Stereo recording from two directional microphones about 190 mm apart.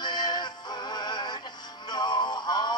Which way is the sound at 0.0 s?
25° left (ahead or behind).